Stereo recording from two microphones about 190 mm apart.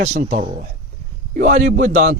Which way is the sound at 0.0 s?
35° right (ahead or behind).